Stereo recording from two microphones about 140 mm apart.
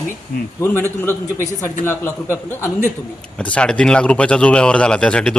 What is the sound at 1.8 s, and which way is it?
A man's voice, 15° left (ahead or behind).